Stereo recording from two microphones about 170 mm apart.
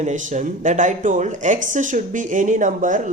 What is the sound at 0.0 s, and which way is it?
Speech, 45° right (ahead or behind).